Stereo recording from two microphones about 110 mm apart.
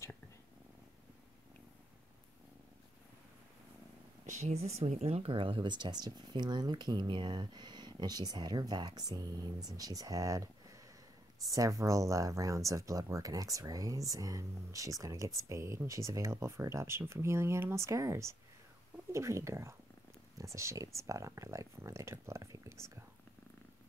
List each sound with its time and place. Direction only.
4.4 s speech: 80° right; by 22.9 s 25° right (ahead or behind)